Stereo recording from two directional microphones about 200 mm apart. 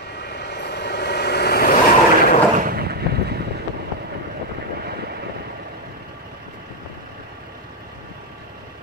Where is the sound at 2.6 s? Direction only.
50° right (ahead or behind).